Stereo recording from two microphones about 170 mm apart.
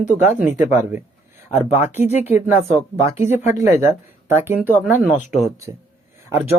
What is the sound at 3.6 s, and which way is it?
Speech, 15° right (ahead or behind).